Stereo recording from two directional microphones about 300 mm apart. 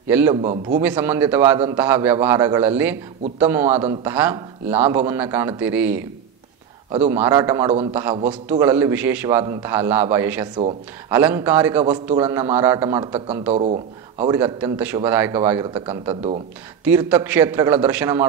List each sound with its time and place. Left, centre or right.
0.1 s a man's voice: centre
13.5 s speech: right
14.2 s a man's voice: centre